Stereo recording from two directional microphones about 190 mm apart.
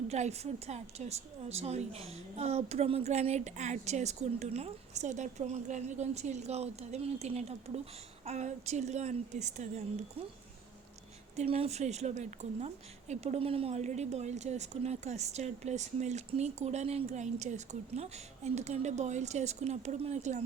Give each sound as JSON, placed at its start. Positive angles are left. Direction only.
{"t": 0.1, "sound": "a woman's voice", "side_deg": -35}
{"t": 11.3, "sound": "a woman's voice", "side_deg": -30}